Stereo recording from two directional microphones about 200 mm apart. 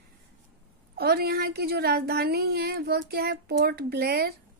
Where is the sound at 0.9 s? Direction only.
50° right (ahead or behind).